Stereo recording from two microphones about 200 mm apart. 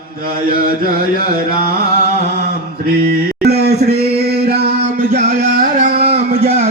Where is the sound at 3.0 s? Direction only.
50° right (ahead or behind).